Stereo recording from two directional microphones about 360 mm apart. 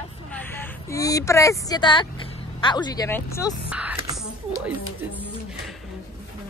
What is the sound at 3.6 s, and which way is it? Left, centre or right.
Speech, centre.